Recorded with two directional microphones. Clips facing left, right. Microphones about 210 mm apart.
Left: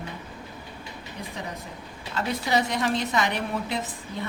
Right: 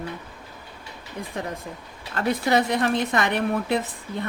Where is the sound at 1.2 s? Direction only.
50° right (ahead or behind).